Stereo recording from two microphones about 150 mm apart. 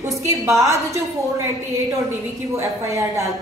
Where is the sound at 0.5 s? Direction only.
20° right (ahead or behind).